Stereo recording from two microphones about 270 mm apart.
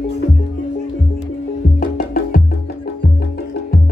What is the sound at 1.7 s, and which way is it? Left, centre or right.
Music, left.